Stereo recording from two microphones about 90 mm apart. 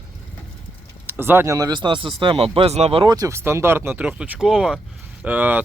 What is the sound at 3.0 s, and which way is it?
Speech, 45° right (ahead or behind).